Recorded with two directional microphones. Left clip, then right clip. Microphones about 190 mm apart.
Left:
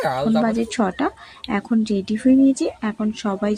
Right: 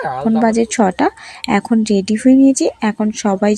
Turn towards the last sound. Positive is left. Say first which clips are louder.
# right 8 dB
turn(degrees=-30)  # may be behind; listen again after turning